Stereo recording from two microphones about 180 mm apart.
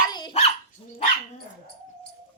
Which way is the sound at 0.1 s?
25° left (ahead or behind).